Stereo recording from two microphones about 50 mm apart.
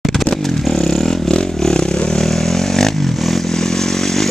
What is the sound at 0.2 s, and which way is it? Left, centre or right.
Motorcycle, centre.